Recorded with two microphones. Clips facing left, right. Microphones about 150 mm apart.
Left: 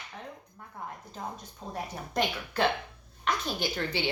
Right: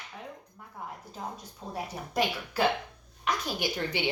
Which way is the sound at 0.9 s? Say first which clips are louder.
Even; 10° right (ahead or behind).